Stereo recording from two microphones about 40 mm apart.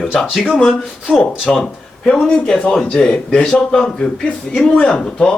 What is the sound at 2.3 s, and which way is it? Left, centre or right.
Speech, left.